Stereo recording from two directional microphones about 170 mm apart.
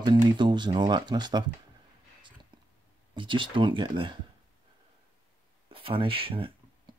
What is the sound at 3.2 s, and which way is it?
Speech, 30° right (ahead or behind).